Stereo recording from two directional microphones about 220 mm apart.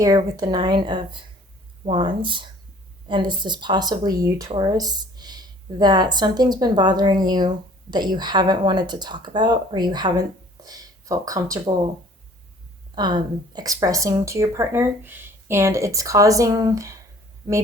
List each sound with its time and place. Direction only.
0.0 s speech: 15° right (ahead or behind)
13.0 s speech: 20° right (ahead or behind)